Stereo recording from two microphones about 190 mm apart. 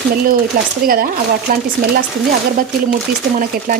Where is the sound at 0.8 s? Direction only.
50° right (ahead or behind).